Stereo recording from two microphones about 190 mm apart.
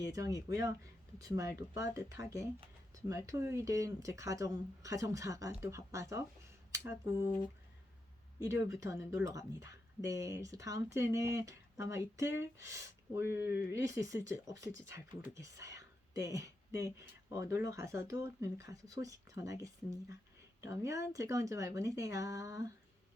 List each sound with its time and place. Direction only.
0.1 s speech: 20° right (ahead or behind)
8.6 s speech: 15° right (ahead or behind)
14.7 s speech: 75° left (ahead or behind)
14.9 s speech: 15° right (ahead or behind)